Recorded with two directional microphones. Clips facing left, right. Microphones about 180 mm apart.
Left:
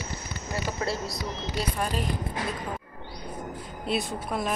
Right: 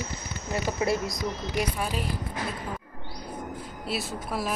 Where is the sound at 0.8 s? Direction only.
15° right (ahead or behind).